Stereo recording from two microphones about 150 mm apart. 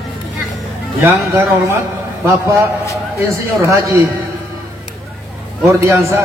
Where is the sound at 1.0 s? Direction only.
15° right (ahead or behind).